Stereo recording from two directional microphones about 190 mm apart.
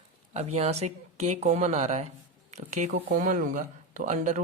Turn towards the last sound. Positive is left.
turn(degrees=-40)  # may be behind; listen again after turning